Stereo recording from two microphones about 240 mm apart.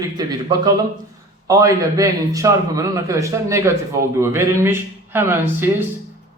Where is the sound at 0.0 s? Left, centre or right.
Centre.